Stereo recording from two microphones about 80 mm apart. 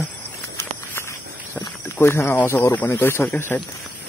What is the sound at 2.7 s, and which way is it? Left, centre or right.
Speech, left.